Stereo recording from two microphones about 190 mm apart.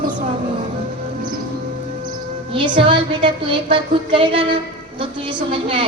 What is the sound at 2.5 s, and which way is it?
A woman's voice, 25° right (ahead or behind).